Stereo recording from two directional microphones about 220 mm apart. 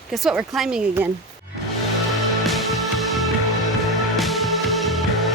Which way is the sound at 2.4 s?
Centre (ahead or behind).